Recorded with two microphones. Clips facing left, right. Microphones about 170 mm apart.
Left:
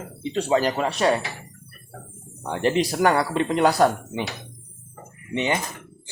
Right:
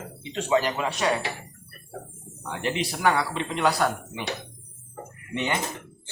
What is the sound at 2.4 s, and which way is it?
Speech, 35° left (ahead or behind).